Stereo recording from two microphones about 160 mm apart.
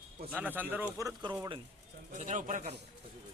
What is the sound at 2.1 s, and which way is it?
Speech, 50° right (ahead or behind).